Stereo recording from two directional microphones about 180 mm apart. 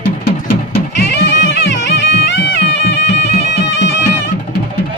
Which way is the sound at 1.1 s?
80° left.